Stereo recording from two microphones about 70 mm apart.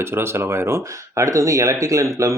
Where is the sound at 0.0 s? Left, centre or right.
Right.